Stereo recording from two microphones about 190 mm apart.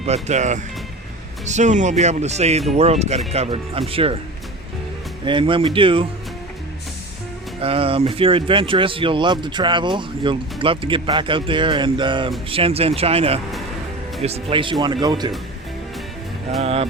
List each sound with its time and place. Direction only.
0.0 s speech: 35° right (ahead or behind)
5.2 s speech: 25° right (ahead or behind)
7.6 s speech: 30° right (ahead or behind)
16.6 s speech: 30° right (ahead or behind)